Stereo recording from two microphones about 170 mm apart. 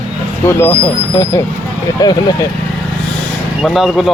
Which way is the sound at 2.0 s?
20° left (ahead or behind).